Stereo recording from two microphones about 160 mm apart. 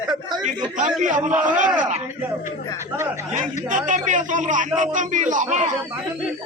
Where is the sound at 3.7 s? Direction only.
50° right (ahead or behind).